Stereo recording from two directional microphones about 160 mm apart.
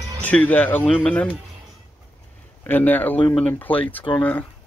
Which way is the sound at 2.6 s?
10° left (ahead or behind).